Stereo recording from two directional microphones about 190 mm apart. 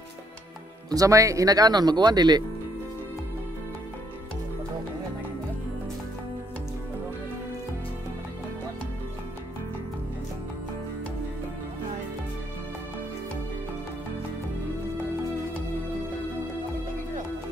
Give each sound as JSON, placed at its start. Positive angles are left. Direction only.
{"t": 0.8, "sound": "speech", "side_deg": -20}